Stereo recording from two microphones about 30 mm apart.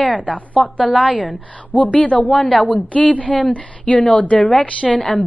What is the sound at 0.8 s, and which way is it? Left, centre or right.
Speech, right.